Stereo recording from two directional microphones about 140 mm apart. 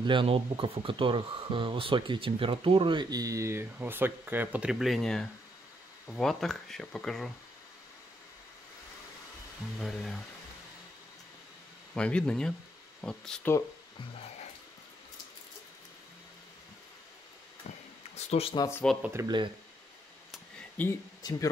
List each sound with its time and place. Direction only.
0.0 s speech: 35° right (ahead or behind); by 7.2 s 5° left (ahead or behind)
9.8 s speech: centre (ahead or behind)
11.9 s speech: 5° left (ahead or behind)
18.1 s speech: 45° left (ahead or behind)
18.6 s speech: 15° left (ahead or behind)
19.2 s speech: 35° right (ahead or behind)
20.8 s speech: 10° left (ahead or behind)
21.2 s speech: 25° left (ahead or behind)